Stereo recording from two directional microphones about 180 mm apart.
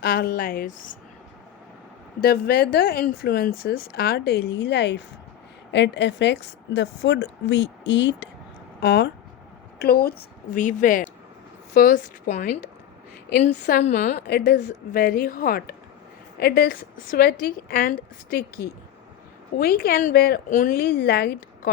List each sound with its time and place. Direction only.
0.0 s a woman's voice: 55° left (ahead or behind)
2.2 s a woman's voice: 60° left (ahead or behind); by 8.3 s 80° left
8.8 s a woman's voice: 65° left (ahead or behind); by 14.2 s 45° left (ahead or behind)
14.2 s speech: 65° left (ahead or behind)
14.6 s a woman's voice: 50° left (ahead or behind)